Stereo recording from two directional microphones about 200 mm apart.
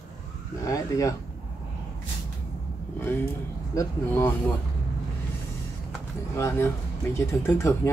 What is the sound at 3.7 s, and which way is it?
Speech, 15° left (ahead or behind).